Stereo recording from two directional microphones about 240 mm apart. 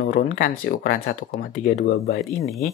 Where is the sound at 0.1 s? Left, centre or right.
Left.